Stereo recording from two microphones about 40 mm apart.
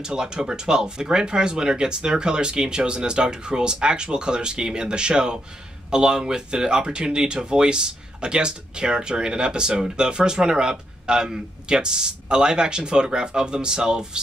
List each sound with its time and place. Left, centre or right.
0.0 s speech: centre